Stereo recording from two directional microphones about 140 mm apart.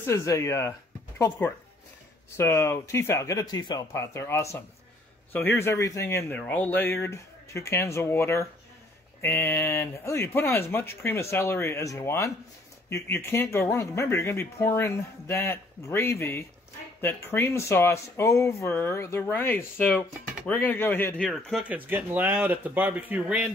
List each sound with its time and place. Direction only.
0.0 s speech: 20° left (ahead or behind)
21.3 s speech: centre (ahead or behind)
21.6 s speech: 10° right (ahead or behind)